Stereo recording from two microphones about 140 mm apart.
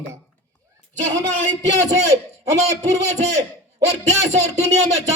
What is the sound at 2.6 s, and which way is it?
A man's voice, 50° right (ahead or behind).